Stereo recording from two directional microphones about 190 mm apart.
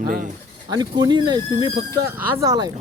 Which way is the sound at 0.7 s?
20° right (ahead or behind).